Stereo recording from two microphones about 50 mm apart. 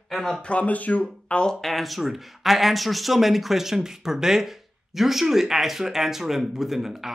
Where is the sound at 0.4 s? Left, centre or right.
Left.